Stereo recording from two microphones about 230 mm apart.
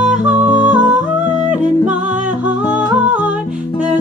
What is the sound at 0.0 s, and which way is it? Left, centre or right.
Music, centre.